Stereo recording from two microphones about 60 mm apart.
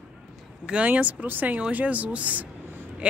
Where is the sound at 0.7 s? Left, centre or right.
Right.